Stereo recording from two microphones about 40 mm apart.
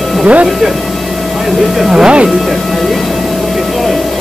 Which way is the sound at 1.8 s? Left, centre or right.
Centre.